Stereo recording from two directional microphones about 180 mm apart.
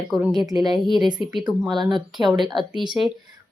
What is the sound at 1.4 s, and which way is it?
Speech, centre (ahead or behind).